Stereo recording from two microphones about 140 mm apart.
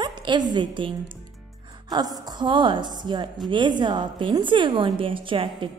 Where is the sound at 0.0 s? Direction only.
35° right (ahead or behind).